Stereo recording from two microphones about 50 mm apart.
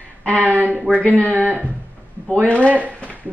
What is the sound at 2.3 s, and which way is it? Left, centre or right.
Speech, left.